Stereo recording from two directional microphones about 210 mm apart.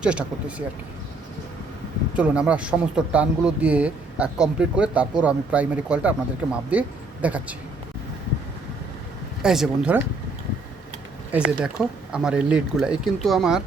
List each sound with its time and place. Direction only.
0.0 s a man's voice: 5° right (ahead or behind)
2.1 s a man's voice: 5° right (ahead or behind)
9.4 s a man's voice: 5° right (ahead or behind)
11.3 s a man's voice: 5° right (ahead or behind)